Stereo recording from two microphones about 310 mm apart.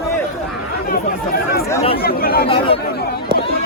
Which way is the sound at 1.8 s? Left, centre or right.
Left.